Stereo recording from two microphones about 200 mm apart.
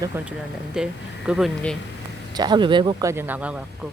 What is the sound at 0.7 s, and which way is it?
Speech, 5° right (ahead or behind).